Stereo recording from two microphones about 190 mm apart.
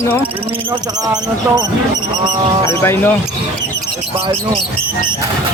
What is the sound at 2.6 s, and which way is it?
Speech, 15° left (ahead or behind).